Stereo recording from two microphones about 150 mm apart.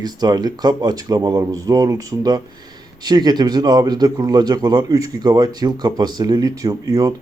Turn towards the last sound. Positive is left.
turn(degrees=-25)  # may be behind; listen again after turning